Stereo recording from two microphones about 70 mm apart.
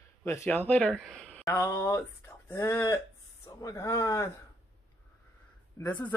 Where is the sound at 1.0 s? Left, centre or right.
Centre.